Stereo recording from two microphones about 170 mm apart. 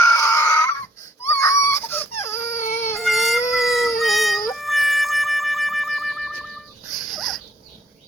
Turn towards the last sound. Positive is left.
turn(degrees=0)  # may be behind; listen again after turning